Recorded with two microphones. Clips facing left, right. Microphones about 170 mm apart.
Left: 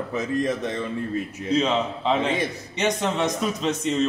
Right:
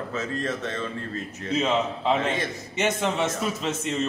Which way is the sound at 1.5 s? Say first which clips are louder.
Left 2 dB; 5° right (ahead or behind).